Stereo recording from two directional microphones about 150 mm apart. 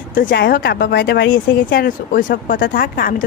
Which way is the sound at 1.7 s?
75° left (ahead or behind).